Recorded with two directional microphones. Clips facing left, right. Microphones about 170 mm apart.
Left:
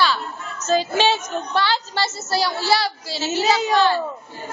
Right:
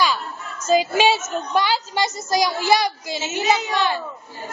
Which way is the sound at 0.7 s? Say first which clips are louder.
Right 2 dB; 10° right (ahead or behind).